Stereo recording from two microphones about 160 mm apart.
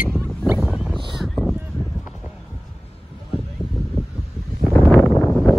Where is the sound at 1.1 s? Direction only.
Centre (ahead or behind).